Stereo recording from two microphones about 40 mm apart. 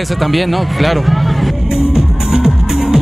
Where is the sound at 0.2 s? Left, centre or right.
Centre.